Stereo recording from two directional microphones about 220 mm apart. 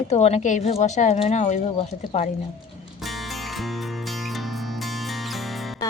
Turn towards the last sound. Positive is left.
turn(degrees=0)  # may be behind; listen again after turning